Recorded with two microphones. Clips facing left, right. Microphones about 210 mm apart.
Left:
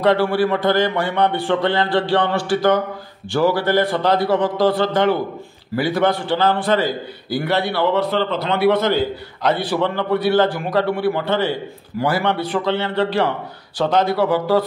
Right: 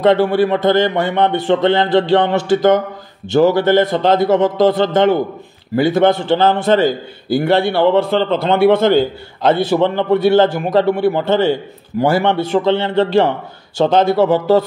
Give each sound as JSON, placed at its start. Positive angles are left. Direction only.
{"t": 0.0, "sound": "a man's voice", "side_deg": -20}